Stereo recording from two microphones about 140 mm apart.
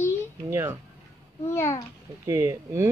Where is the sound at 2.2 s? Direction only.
20° right (ahead or behind).